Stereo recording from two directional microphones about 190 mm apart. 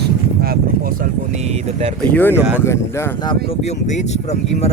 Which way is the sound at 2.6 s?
15° left (ahead or behind).